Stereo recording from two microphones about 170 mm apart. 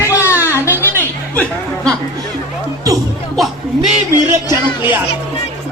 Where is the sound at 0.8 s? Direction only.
10° left (ahead or behind).